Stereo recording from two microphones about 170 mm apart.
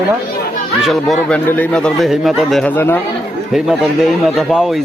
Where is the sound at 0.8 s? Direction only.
Centre (ahead or behind).